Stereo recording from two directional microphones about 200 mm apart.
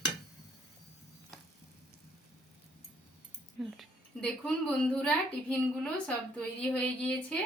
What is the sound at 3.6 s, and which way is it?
A woman's voice, centre (ahead or behind).